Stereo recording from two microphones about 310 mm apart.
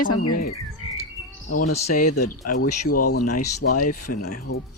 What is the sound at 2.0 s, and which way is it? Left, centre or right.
Speech, left.